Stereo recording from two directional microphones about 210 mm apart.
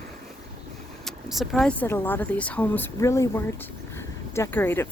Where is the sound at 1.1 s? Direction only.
Centre (ahead or behind).